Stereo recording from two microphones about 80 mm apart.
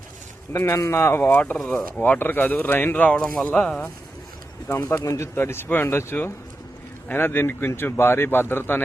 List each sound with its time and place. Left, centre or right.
0.5 s speech: left
1.5 s speech: centre
2.0 s speech: left
4.7 s speech: left